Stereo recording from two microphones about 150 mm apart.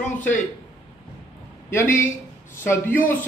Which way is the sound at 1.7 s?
15° left (ahead or behind).